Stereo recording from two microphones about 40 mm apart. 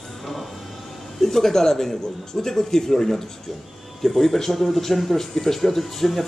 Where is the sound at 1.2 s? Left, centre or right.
Centre.